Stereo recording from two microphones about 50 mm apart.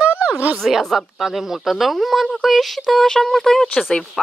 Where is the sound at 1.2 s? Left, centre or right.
Centre.